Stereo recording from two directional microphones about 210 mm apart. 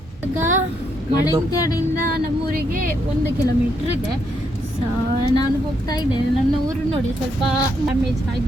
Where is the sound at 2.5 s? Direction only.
40° right (ahead or behind).